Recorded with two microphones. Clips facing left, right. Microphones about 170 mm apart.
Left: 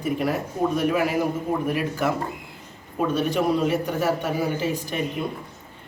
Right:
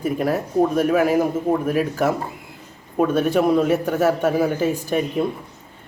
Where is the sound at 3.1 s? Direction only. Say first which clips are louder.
Right 5 dB; 50° right (ahead or behind).